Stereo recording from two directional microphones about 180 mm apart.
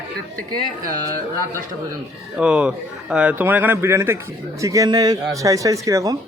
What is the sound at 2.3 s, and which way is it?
A man's voice, 5° right (ahead or behind).